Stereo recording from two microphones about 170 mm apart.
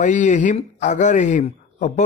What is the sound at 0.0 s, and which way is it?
A man's voice, 45° left (ahead or behind).